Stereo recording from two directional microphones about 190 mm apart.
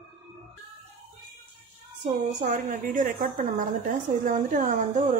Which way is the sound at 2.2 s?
40° right (ahead or behind).